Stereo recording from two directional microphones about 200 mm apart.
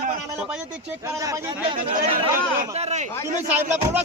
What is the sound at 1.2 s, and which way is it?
Speech, 15° right (ahead or behind).